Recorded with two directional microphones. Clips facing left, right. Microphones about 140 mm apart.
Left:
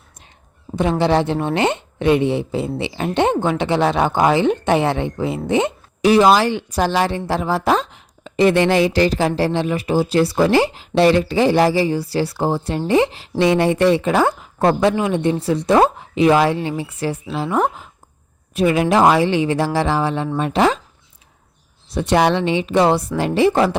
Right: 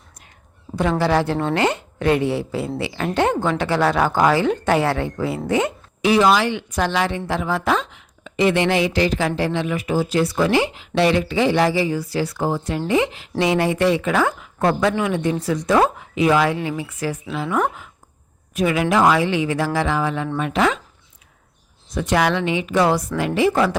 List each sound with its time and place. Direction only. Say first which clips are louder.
0.8 s speech: left 2 dB; 20° left (ahead or behind)
6.0 s a woman's voice: left 3 dB; 35° left (ahead or behind)
21.9 s speech: left 3 dB; 30° left (ahead or behind)